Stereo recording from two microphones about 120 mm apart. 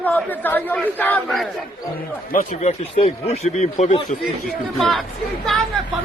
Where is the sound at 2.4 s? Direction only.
80° left.